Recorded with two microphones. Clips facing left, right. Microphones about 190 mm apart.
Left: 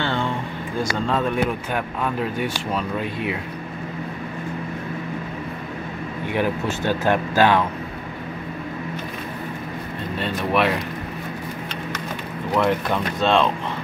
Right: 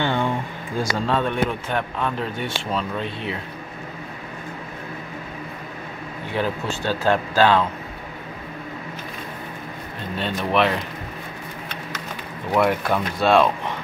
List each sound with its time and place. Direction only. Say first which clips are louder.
0.0 s a sound: right 2 dB; 15° right (ahead or behind)
1.0 s speech: left 1 dB; centre (ahead or behind)
6.3 s speech: left 2 dB; 15° left (ahead or behind)
10.1 s speech: even; centre (ahead or behind)
12.5 s speech: right 1 dB; 10° right (ahead or behind)